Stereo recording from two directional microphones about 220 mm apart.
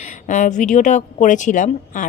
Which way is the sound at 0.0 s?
35° left (ahead or behind).